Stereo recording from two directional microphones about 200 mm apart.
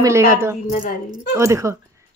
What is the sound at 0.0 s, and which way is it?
Speech, 15° right (ahead or behind).